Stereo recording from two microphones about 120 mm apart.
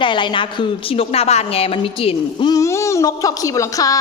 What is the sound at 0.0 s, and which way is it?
A woman's voice, 40° left (ahead or behind).